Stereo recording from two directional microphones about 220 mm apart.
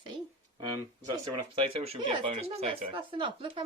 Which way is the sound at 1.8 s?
25° right (ahead or behind).